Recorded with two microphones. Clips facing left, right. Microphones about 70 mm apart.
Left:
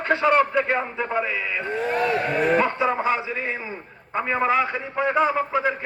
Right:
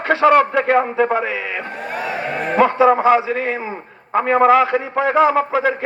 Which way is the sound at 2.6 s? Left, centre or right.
Right.